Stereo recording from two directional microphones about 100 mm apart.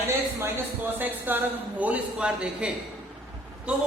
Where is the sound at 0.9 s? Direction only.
20° right (ahead or behind).